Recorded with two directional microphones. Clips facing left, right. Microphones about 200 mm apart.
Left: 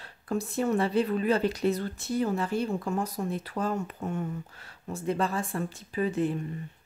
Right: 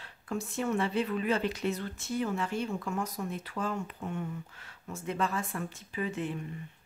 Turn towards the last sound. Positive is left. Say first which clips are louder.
# left 6 dB
turn(degrees=35)  # may be behind; listen again after turning